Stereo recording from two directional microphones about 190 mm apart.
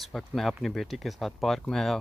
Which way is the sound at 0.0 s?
Centre (ahead or behind).